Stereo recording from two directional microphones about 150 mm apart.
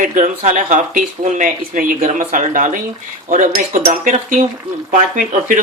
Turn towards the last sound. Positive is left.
turn(degrees=-60)  # may be behind; listen again after turning